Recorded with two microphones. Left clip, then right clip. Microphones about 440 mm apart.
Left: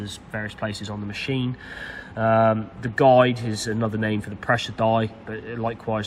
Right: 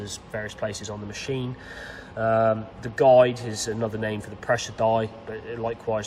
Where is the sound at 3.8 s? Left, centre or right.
Left.